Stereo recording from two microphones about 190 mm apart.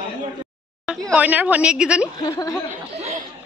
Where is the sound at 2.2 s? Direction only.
20° left (ahead or behind).